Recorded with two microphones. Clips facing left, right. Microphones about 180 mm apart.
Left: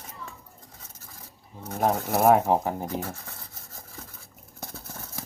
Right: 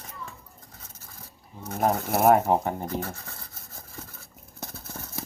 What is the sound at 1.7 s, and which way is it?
Speech, centre (ahead or behind).